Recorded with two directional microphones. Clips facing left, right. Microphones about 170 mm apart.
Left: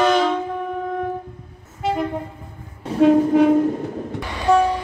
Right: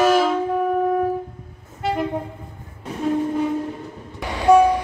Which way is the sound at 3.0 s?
80° left.